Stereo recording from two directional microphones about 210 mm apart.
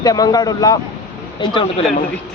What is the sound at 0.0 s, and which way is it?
Speech, 20° left (ahead or behind).